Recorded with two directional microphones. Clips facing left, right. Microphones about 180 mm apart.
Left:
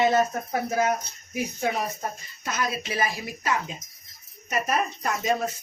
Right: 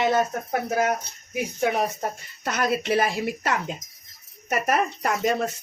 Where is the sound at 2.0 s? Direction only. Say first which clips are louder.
Right 3 dB; 65° right (ahead or behind).